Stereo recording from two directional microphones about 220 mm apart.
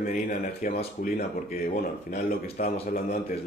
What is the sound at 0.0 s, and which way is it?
Speech, 40° left (ahead or behind).